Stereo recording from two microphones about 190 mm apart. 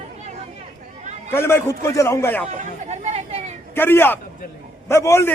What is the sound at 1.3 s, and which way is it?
A man's voice, 10° left (ahead or behind).